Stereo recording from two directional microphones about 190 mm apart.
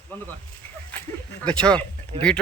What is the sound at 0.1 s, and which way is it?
Speech, 10° left (ahead or behind).